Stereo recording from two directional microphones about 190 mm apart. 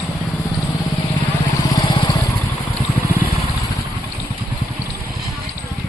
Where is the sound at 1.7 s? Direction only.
25° left (ahead or behind).